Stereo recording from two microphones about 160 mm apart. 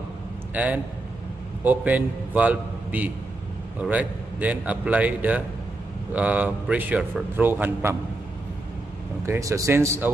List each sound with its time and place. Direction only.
0.5 s a man's voice: 10° right (ahead or behind)
9.2 s speech: 20° right (ahead or behind)